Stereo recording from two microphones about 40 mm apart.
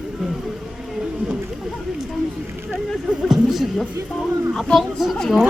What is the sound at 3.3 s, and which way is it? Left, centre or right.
Music, centre.